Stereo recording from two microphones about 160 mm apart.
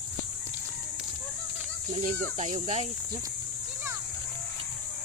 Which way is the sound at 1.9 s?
50° right (ahead or behind).